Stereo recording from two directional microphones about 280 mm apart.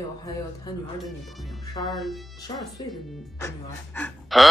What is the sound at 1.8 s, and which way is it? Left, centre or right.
Speech, centre.